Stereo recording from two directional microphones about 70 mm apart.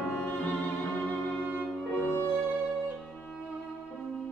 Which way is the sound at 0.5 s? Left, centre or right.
Left.